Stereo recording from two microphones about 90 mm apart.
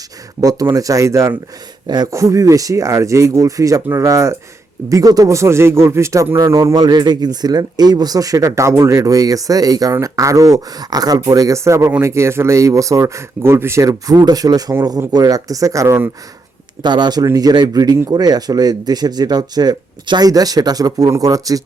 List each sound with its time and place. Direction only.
0.4 s speech: 40° right (ahead or behind)
6.7 s speech: 50° right (ahead or behind)
16.8 s speech: 55° right (ahead or behind)